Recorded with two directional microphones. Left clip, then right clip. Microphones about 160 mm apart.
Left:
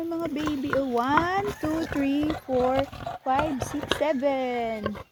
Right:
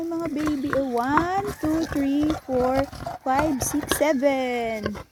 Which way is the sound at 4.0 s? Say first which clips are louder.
Right 4 dB; 45° right (ahead or behind).